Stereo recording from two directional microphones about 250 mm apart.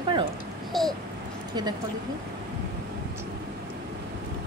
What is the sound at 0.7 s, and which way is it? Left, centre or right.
Babbling, centre.